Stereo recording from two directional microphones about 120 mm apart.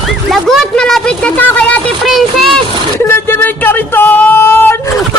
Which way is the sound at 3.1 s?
20° left (ahead or behind).